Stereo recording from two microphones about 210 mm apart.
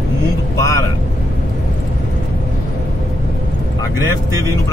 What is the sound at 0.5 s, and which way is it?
Vehicle, 15° left (ahead or behind).